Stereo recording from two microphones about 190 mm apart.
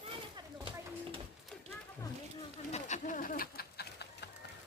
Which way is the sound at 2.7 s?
40° left (ahead or behind).